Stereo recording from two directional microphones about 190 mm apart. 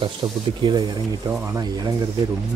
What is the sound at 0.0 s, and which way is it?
Speech, 25° right (ahead or behind).